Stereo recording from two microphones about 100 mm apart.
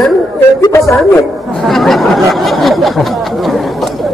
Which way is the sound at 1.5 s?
Centre (ahead or behind).